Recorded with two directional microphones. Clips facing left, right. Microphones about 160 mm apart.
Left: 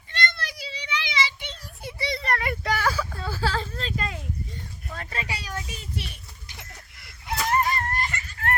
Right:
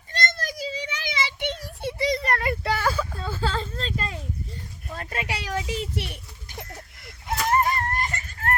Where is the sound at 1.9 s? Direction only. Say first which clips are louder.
Right 6 dB; 45° right (ahead or behind).